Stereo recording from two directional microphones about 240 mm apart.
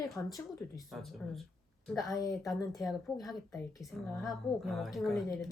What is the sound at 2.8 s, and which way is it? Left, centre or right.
Speech, centre.